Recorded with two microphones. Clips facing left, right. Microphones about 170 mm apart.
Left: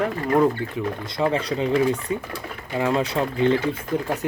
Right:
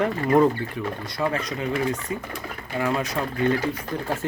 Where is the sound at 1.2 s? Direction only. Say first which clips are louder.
Left 4 dB; 25° left (ahead or behind).